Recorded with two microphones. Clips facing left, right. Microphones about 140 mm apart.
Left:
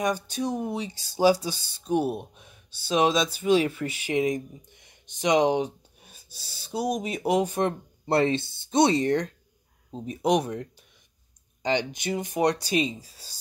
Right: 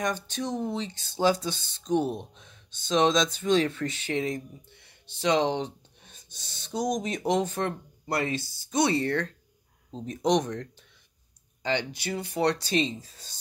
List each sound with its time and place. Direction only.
0.0 s speech: 10° left (ahead or behind)
8.1 s speech: 25° left (ahead or behind); by 13.4 s 10° left (ahead or behind)